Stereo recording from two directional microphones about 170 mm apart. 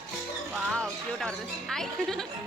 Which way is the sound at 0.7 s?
Centre (ahead or behind).